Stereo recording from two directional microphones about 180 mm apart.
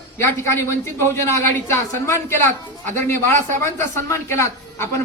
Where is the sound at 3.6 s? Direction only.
15° left (ahead or behind).